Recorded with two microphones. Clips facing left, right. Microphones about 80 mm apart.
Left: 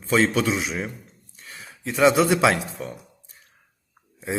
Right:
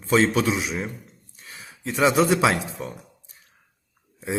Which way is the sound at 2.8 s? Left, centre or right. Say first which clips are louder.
Even; centre.